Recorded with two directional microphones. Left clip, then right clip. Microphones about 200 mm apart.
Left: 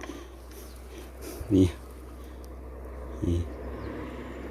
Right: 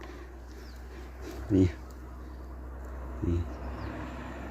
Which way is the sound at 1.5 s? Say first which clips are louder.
Left 3 dB; 10° left (ahead or behind).